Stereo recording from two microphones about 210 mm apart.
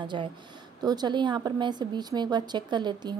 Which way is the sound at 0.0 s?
20° right (ahead or behind).